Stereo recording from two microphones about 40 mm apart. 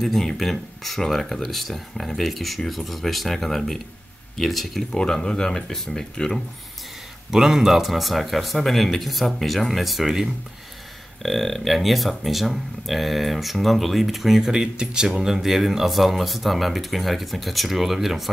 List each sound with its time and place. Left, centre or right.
0.0 s speech: centre
4.9 s speech: centre
7.2 s speech: centre
11.2 s speech: centre
15.2 s speech: centre